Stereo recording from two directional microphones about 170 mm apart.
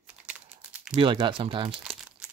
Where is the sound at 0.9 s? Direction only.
30° right (ahead or behind).